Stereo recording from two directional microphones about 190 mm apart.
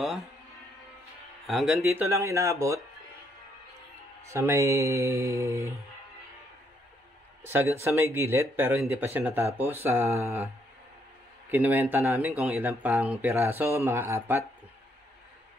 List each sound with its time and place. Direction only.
0.0 s speech: centre (ahead or behind)
1.5 s speech: centre (ahead or behind)
1.9 s speech: 15° right (ahead or behind)
4.3 s speech: 15° right (ahead or behind)
7.8 s speech: 15° right (ahead or behind)
11.4 s speech: 10° right (ahead or behind)